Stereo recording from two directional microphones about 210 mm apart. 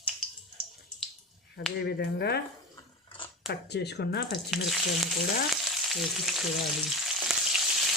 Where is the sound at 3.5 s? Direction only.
50° left (ahead or behind).